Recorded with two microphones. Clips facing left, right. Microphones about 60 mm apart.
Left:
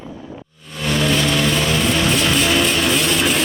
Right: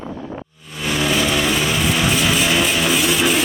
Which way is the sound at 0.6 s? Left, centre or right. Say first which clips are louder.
Left 2 dB; centre.